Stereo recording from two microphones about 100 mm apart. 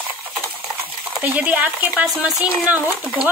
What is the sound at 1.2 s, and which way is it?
Speech, 15° right (ahead or behind).